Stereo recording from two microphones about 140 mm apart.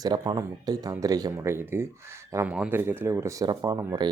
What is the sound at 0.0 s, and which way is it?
Speech, 30° right (ahead or behind).